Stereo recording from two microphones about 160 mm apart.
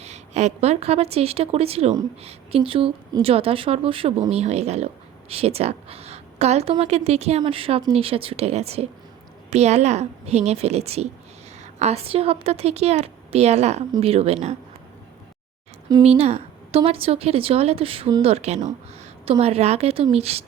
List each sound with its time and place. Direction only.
0.0 s a woman's voice: 45° right (ahead or behind)
16.0 s speech: 40° right (ahead or behind)